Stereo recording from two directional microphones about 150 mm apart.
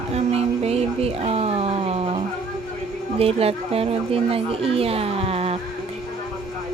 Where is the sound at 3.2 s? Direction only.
40° right (ahead or behind).